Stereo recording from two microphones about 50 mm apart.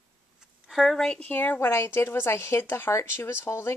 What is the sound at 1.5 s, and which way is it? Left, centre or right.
Speech, left.